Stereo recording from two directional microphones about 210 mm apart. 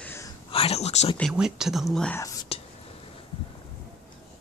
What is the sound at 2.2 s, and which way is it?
Whispering, 20° left (ahead or behind).